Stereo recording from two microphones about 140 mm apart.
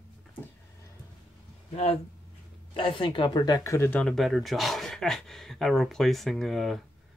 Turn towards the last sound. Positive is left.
turn(degrees=0)  # may be behind; listen again after turning